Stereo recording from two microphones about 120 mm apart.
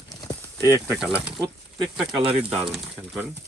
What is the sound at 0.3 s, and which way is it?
Clip-clop, 25° left (ahead or behind).